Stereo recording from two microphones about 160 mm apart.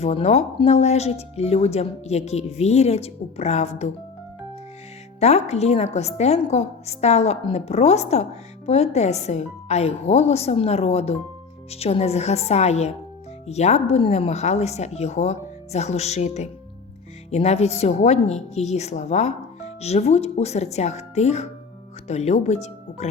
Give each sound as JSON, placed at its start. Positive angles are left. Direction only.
{"t": 0.0, "sound": "a woman's voice", "side_deg": 40}
{"t": 5.2, "sound": "a woman's voice", "side_deg": 45}